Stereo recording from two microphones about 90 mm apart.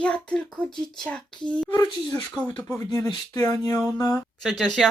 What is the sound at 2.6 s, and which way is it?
Speech, 35° left (ahead or behind).